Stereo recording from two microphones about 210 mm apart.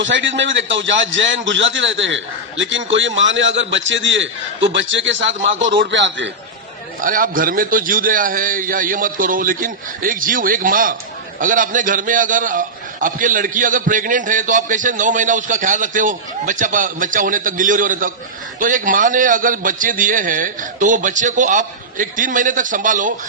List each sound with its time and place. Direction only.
0.0 s a man's voice: 60° right (ahead or behind)
7.0 s a man's voice: 40° right (ahead or behind)